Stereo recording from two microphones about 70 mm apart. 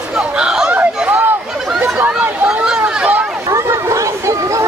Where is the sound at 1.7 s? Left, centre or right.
Right.